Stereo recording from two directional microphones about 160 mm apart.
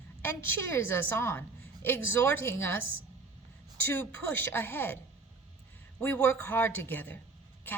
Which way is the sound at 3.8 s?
15° left (ahead or behind).